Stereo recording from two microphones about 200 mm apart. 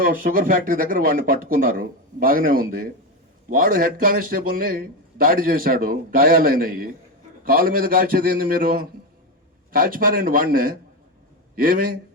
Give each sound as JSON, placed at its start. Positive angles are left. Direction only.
{"t": 0.0, "sound": "a man's voice", "side_deg": -45}